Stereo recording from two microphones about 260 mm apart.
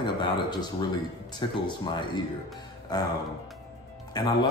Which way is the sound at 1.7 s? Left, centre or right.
Centre.